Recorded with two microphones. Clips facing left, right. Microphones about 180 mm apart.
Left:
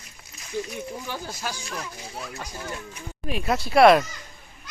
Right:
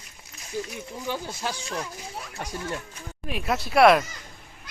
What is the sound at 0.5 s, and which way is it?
Speech, 10° right (ahead or behind).